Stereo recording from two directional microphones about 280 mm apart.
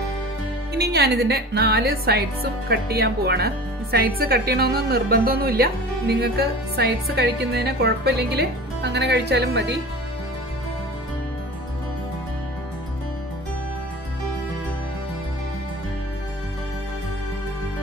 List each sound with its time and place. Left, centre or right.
0.7 s speech: right